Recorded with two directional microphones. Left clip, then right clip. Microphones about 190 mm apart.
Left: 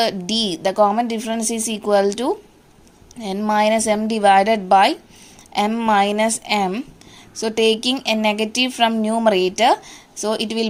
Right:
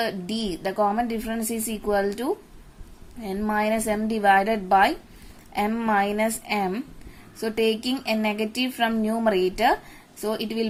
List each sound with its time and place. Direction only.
0.0 s a woman's voice: 25° left (ahead or behind)